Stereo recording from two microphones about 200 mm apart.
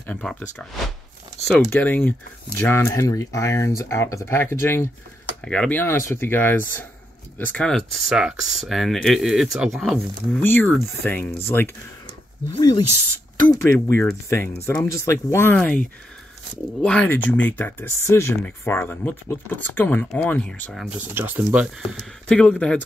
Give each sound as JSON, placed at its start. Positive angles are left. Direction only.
{"t": 0.0, "sound": "speech", "side_deg": 5}
{"t": 1.7, "sound": "speech", "side_deg": 10}
{"t": 10.4, "sound": "speech", "side_deg": 10}
{"t": 12.5, "sound": "speech", "side_deg": 20}
{"t": 21.0, "sound": "speech", "side_deg": -10}
{"t": 21.8, "sound": "speech", "side_deg": 5}